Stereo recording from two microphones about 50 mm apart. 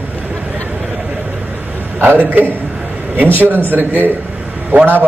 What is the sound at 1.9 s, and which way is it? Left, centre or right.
Speech, right.